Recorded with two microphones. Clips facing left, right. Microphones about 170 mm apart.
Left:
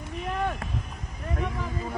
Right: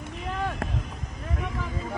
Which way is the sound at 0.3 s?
Centre (ahead or behind).